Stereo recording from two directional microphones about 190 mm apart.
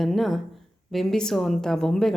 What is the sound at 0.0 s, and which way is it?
A woman's voice, centre (ahead or behind).